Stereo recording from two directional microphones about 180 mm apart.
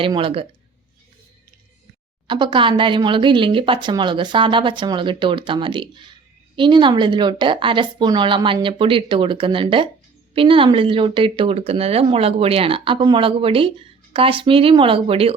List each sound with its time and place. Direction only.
0.0 s speech: 30° right (ahead or behind)
2.2 s speech: 25° right (ahead or behind)